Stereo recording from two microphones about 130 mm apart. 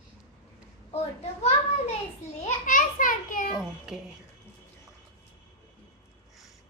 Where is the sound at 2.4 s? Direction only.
90° left.